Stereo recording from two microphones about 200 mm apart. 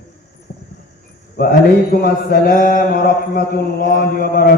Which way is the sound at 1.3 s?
50° left (ahead or behind).